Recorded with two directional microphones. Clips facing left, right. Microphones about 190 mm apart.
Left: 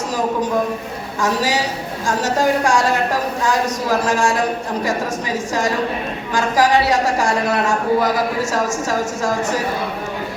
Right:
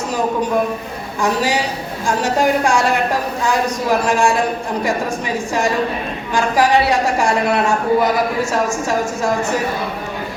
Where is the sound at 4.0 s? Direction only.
25° right (ahead or behind).